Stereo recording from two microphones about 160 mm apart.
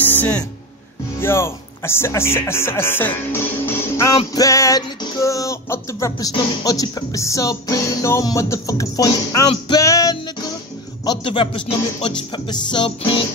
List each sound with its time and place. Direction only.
1.2 s speech: 15° left (ahead or behind)
4.3 s music: 20° left (ahead or behind)
11.1 s music: 30° left (ahead or behind)